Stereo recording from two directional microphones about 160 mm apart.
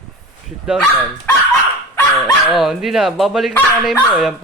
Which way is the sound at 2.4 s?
Centre (ahead or behind).